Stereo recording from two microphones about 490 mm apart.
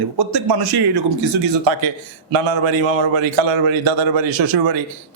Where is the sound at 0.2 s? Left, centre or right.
Right.